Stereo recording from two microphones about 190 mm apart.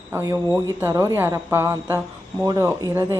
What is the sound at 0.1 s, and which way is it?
Speech, 10° right (ahead or behind).